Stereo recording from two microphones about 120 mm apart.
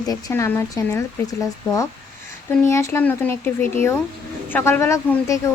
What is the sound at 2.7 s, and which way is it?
Speech, 25° left (ahead or behind).